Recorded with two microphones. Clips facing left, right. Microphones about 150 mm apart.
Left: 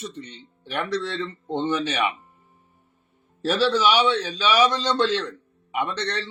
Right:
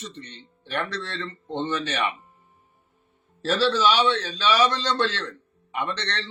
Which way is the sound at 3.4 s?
10° left (ahead or behind).